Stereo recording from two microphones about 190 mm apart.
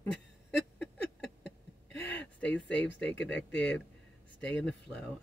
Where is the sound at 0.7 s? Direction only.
5° left (ahead or behind).